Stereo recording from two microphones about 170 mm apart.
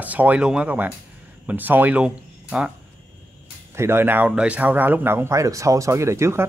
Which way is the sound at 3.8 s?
15° right (ahead or behind).